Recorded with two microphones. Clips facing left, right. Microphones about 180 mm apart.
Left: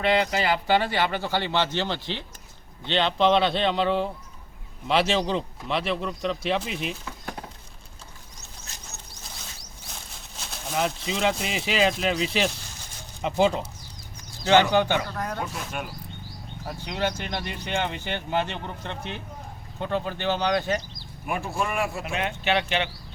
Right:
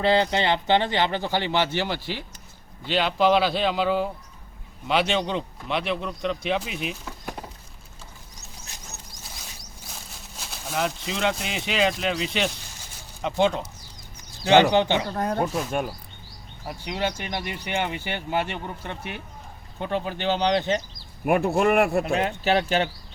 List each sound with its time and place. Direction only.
0.0 s speech: 30° right (ahead or behind); by 7.4 s 5° right (ahead or behind)
9.9 s speech: centre (ahead or behind)
14.4 s speech: 15° right (ahead or behind)
15.1 s speech: 30° right (ahead or behind)
15.4 s speech: 45° right (ahead or behind)
16.6 s speech: 15° right (ahead or behind)
21.2 s speech: 60° right (ahead or behind)
22.0 s speech: 35° right (ahead or behind)